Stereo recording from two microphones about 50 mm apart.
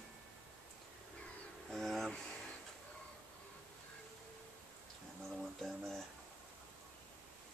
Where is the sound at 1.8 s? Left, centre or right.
Centre.